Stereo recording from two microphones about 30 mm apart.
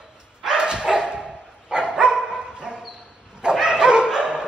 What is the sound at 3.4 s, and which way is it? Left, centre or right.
Bow-wow, right.